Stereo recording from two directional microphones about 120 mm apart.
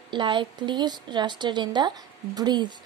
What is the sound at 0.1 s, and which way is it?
Speech, 40° right (ahead or behind).